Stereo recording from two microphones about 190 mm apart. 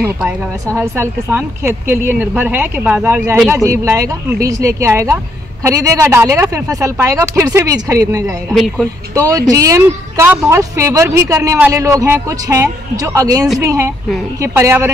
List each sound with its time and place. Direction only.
0.7 s speech: 10° right (ahead or behind)
8.5 s speech: centre (ahead or behind)
9.1 s speech: 15° right (ahead or behind)